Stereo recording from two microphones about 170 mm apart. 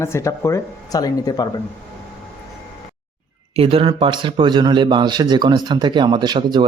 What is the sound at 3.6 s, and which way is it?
Speech, 35° right (ahead or behind).